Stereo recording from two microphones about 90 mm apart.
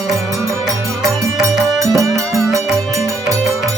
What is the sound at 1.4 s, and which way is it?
Music, 40° right (ahead or behind).